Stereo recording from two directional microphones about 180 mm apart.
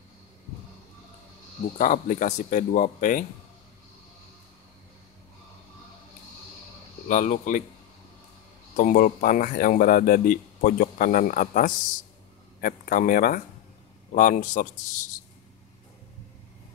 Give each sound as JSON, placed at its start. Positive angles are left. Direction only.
{"t": 1.8, "sound": "speech", "side_deg": 45}
{"t": 7.1, "sound": "speech", "side_deg": 45}
{"t": 8.7, "sound": "speech", "side_deg": 50}